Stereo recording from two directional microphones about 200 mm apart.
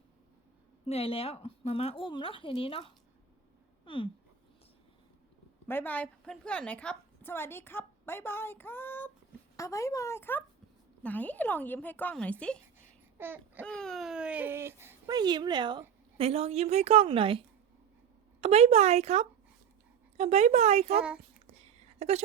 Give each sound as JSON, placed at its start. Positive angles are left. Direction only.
{"t": 0.9, "sound": "a woman's voice", "side_deg": 30}
{"t": 3.8, "sound": "a sound", "side_deg": 25}
{"t": 5.6, "sound": "a woman's voice", "side_deg": 10}
{"t": 13.1, "sound": "babbling", "side_deg": -10}
{"t": 13.7, "sound": "a woman's voice", "side_deg": 5}
{"t": 21.6, "sound": "a sound", "side_deg": -30}